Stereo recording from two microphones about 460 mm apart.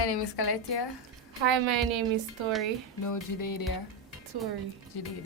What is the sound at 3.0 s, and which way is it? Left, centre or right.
Music, left.